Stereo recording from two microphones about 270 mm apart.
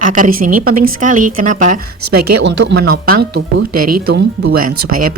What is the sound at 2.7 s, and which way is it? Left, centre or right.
Speech, right.